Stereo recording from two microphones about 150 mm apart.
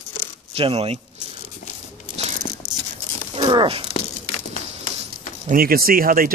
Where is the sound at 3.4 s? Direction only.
30° right (ahead or behind).